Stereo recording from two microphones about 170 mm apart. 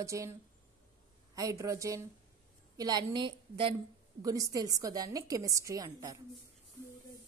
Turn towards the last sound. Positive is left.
turn(degrees=-20)  # may be behind; listen again after turning